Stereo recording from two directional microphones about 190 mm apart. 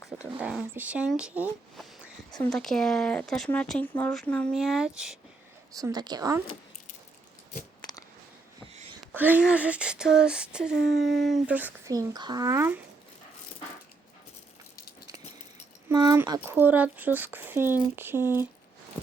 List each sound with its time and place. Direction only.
0.3 s speech: 5° right (ahead or behind)
2.4 s female singing: centre (ahead or behind)
5.7 s a woman's voice: 20° right (ahead or behind)
7.8 s a sound: 20° left (ahead or behind)
9.1 s female singing: 10° right (ahead or behind)
15.9 s a woman's voice: 20° right (ahead or behind)